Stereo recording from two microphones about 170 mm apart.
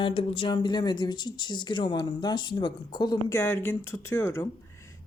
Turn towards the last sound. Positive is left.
turn(degrees=15)  # may be behind; listen again after turning